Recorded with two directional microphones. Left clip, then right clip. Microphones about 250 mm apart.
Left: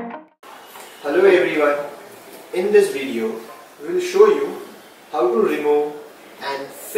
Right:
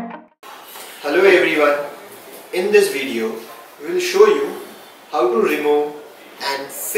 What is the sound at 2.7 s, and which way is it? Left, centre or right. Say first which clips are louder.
A man's voice: right 1 dB; centre.